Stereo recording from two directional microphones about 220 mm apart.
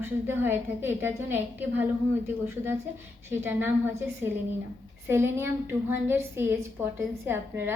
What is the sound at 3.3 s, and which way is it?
A woman's voice, 10° right (ahead or behind).